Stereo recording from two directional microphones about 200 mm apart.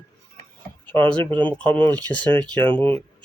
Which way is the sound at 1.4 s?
5° left (ahead or behind).